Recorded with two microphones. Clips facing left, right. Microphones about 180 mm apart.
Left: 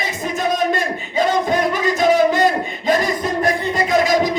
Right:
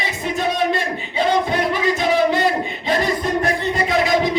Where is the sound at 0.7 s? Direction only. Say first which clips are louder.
Left 2 dB; 45° left (ahead or behind).